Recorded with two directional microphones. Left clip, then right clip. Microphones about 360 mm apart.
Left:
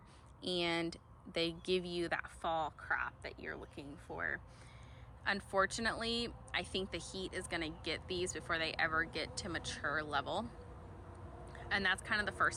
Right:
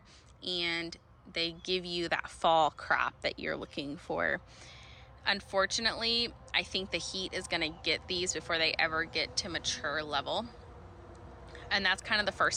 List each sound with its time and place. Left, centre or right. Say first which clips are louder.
0.4 s speech: right 3 dB; centre
11.5 s speech: right 5 dB; centre